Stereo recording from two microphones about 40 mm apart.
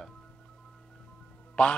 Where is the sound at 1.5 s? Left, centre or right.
Left.